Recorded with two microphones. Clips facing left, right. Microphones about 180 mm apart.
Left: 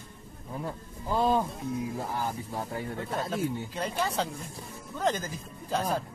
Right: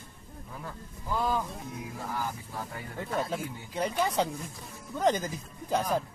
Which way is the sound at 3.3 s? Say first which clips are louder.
Left 4 dB; 15° right (ahead or behind).